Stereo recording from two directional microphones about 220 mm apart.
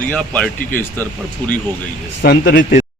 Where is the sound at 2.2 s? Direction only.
50° left (ahead or behind).